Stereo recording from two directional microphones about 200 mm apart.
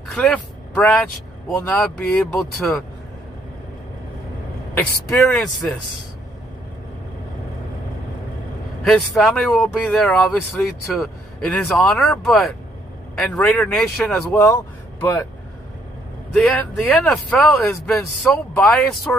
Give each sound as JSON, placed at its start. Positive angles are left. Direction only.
{"t": 0.1, "sound": "speech", "side_deg": 5}
{"t": 4.7, "sound": "speech", "side_deg": 0}
{"t": 8.8, "sound": "speech", "side_deg": 0}
{"t": 16.3, "sound": "speech", "side_deg": 0}